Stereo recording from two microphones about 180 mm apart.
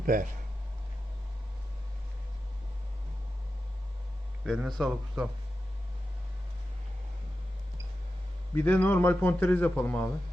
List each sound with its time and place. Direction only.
0.0 s speech: 50° right (ahead or behind)
4.4 s speech: centre (ahead or behind)
8.5 s a man's voice: 10° left (ahead or behind)